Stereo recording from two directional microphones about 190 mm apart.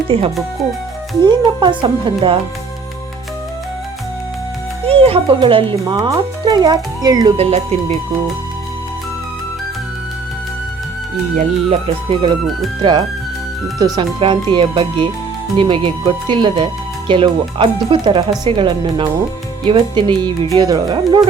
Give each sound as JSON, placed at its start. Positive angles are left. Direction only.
{"t": 0.1, "sound": "speech", "side_deg": -30}
{"t": 4.9, "sound": "speech", "side_deg": -30}
{"t": 7.3, "sound": "speech", "side_deg": -35}
{"t": 11.3, "sound": "speech", "side_deg": -30}